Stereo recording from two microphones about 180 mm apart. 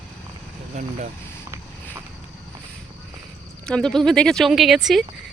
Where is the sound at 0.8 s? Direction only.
45° right (ahead or behind).